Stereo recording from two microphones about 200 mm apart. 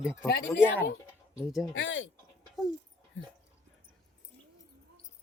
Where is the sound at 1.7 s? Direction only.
70° left (ahead or behind).